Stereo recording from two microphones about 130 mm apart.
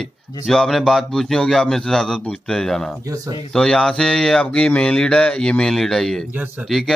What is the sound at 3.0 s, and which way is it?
Speech, 25° right (ahead or behind).